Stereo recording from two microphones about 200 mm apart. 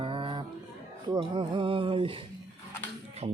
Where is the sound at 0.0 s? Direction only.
25° right (ahead or behind).